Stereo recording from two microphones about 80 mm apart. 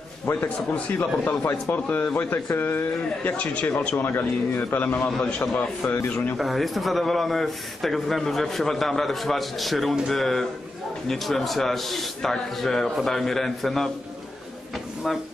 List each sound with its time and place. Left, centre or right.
0.2 s speech: left
6.3 s speech: centre
15.0 s speech: centre